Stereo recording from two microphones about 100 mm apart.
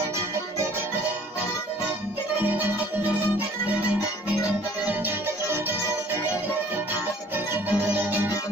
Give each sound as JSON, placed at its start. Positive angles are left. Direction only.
{"t": 2.4, "sound": "music", "side_deg": -15}
{"t": 7.5, "sound": "music", "side_deg": -20}